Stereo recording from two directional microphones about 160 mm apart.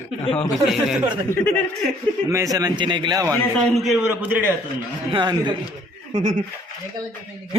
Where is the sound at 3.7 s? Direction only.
Centre (ahead or behind).